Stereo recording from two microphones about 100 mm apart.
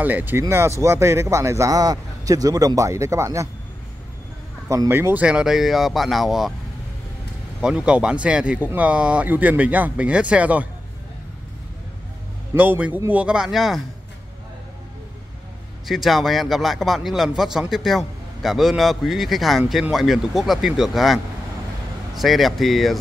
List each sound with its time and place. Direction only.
0.0 s speech: 20° right (ahead or behind)
4.6 s a man's voice: 25° right (ahead or behind); by 6.5 s centre (ahead or behind)
7.6 s speech: 10° right (ahead or behind)
12.5 s speech: 15° right (ahead or behind)
15.9 s a man's voice: centre (ahead or behind)